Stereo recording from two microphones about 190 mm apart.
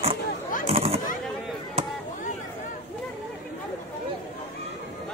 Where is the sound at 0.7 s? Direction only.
30° right (ahead or behind).